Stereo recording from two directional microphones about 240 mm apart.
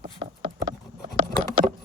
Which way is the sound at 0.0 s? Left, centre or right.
Right.